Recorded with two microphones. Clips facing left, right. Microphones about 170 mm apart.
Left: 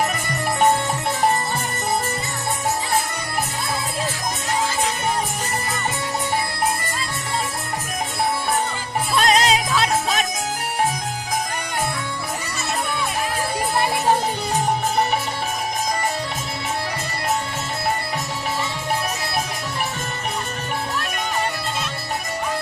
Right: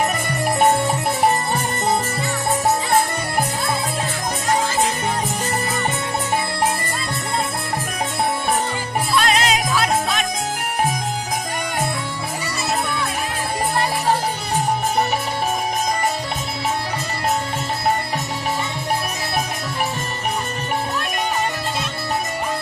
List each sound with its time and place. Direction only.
9.2 s music: 35° left (ahead or behind)